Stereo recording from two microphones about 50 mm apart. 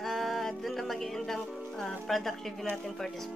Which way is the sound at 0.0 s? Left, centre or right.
Centre.